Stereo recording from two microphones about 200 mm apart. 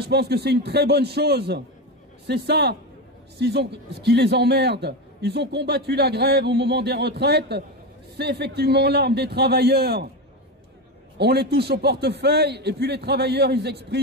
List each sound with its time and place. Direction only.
0.0 s a man's voice: 55° right (ahead or behind)
11.1 s a man's voice: 55° right (ahead or behind)